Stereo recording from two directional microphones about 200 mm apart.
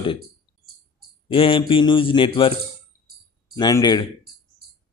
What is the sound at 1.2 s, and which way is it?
Speech, 25° left (ahead or behind).